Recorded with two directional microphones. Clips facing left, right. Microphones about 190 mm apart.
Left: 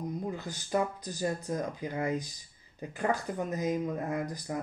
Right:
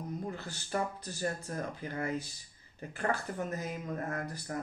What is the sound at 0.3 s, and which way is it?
Speech, 15° left (ahead or behind).